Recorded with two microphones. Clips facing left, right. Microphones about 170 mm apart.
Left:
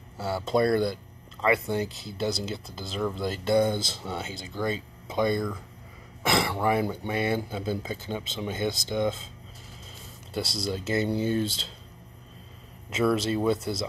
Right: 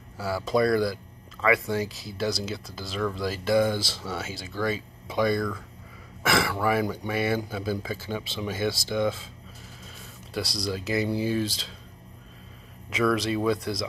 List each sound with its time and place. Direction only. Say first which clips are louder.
0.2 s speech: right 1 dB; 25° left (ahead or behind)
10.3 s speech: even; 25° left (ahead or behind)
11.1 s speech: even; 5° right (ahead or behind)
13.0 s speech: even; 25° left (ahead or behind)